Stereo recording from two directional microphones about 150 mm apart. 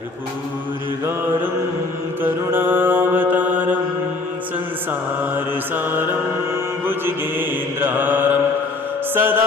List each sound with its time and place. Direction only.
2.2 s mantra: 15° right (ahead or behind)
4.9 s mantra: 15° right (ahead or behind)
9.1 s music: 15° right (ahead or behind)